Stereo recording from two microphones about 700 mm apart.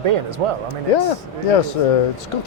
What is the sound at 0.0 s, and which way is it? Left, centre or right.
Speech, right.